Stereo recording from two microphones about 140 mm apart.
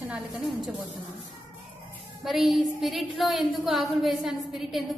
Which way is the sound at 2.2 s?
Centre (ahead or behind).